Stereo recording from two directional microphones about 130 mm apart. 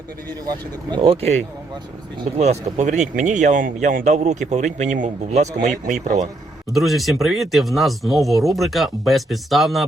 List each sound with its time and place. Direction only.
0.4 s speech: 35° right (ahead or behind); by 1.4 s 50° right (ahead or behind)
2.4 s speech: 60° right (ahead or behind)
6.7 s speech: centre (ahead or behind)